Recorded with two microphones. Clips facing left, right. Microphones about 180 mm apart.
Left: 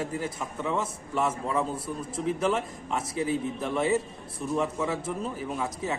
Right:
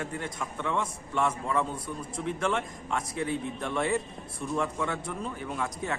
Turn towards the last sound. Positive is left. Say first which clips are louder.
# left 2 dB
turn(degrees=5)  # may be behind; listen again after turning